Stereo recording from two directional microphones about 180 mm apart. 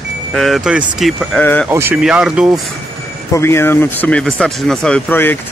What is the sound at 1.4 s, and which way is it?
Speech, 10° left (ahead or behind).